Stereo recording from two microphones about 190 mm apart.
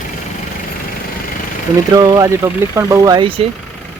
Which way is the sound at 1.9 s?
20° right (ahead or behind).